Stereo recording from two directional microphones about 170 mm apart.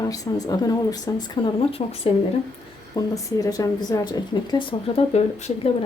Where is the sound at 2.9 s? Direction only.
20° left (ahead or behind); by 5.7 s 40° left (ahead or behind).